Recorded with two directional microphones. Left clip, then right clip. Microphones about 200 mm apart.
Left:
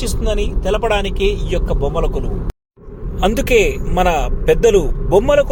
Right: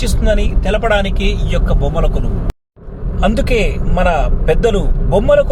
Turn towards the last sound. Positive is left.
turn(degrees=25)  # may be behind; listen again after turning